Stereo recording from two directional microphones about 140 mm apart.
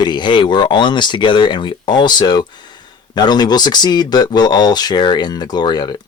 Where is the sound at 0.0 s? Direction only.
30° left (ahead or behind).